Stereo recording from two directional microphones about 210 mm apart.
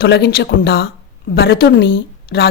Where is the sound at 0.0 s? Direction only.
50° left (ahead or behind).